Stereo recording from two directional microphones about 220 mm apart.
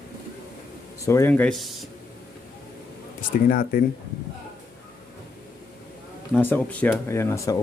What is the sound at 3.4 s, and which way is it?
Speech, 40° left (ahead or behind).